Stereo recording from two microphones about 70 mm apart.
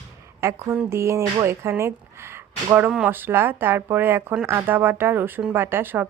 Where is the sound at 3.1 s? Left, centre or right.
Right.